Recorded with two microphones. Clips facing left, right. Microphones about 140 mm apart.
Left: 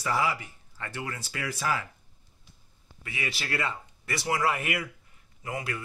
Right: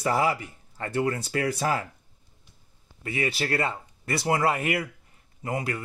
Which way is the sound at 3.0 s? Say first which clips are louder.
Right 8 dB; 40° right (ahead or behind).